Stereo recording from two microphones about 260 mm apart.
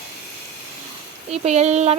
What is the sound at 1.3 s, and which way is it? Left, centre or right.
Speech, right.